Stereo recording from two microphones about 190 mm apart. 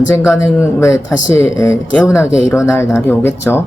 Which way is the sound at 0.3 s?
15° left (ahead or behind).